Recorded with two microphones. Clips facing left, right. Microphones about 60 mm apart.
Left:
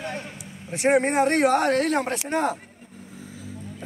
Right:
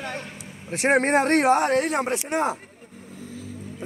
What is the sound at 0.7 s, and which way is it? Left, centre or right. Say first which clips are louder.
Speech: right 1 dB; right.